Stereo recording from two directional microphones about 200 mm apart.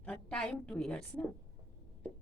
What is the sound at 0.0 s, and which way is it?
A woman's voice, 5° left (ahead or behind).